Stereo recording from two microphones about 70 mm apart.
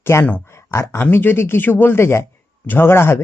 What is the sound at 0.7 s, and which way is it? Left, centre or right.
Speech, left.